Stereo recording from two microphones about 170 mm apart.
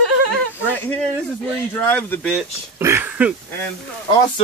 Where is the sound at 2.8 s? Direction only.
15° right (ahead or behind).